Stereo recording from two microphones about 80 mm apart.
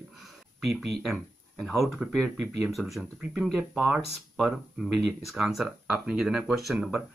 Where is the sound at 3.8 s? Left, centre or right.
Centre.